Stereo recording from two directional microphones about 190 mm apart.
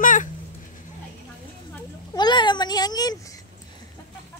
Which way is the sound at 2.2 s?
25° left (ahead or behind).